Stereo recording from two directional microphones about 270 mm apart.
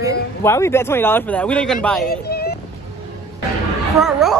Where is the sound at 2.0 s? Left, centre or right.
Left.